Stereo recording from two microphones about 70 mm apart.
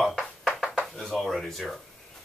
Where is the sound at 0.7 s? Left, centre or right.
Centre.